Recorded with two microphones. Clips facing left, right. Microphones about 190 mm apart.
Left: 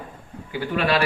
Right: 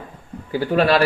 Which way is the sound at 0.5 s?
35° right (ahead or behind).